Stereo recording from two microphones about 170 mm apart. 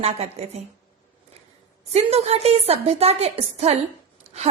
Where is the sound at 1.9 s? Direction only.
35° right (ahead or behind).